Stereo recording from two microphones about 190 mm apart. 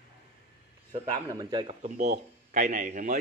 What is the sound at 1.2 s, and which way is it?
Speech, 20° right (ahead or behind).